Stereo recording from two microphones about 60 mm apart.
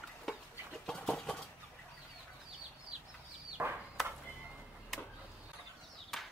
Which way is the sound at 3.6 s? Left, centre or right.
Right.